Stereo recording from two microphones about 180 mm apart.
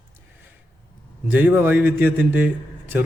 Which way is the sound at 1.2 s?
10° right (ahead or behind).